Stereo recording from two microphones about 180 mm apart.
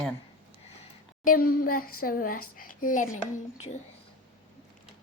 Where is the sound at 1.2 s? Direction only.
55° left (ahead or behind).